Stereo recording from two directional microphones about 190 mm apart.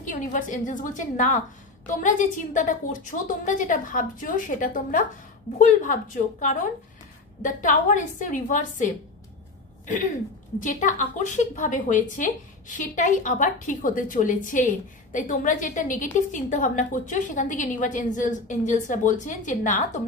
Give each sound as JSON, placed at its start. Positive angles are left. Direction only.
{"t": 0.0, "sound": "a woman's voice", "side_deg": 45}
{"t": 10.6, "sound": "a woman's voice", "side_deg": 40}